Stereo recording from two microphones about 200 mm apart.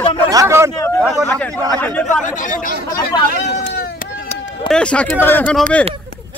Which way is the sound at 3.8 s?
45° left (ahead or behind).